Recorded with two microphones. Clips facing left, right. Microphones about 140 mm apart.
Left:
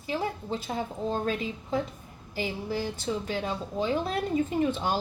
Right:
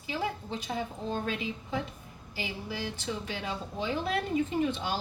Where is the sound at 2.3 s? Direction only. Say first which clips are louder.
Left 6 dB; 45° left (ahead or behind).